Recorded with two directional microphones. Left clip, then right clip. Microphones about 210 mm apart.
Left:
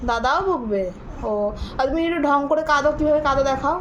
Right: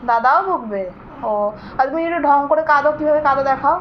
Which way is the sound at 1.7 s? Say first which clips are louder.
Right 3 dB; 75° left (ahead or behind).